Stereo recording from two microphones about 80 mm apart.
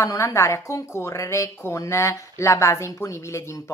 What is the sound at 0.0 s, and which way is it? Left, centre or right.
Speech, left.